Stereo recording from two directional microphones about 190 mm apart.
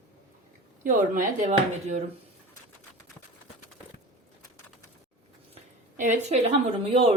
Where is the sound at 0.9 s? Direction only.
40° right (ahead or behind).